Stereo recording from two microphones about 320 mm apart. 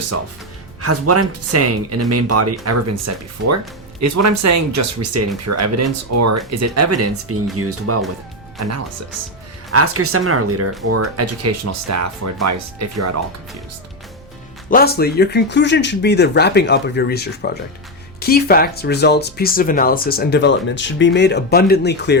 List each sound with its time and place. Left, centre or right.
0.8 s speech: right
4.0 s speech: right
14.7 s speech: left